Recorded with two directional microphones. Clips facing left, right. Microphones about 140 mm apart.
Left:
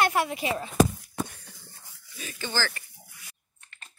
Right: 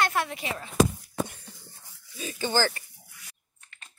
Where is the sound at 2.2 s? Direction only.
25° right (ahead or behind).